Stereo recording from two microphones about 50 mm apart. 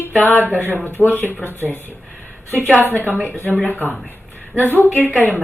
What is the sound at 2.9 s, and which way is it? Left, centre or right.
Speech, left.